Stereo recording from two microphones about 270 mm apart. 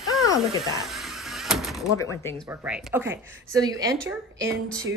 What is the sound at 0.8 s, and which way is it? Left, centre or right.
Door, centre.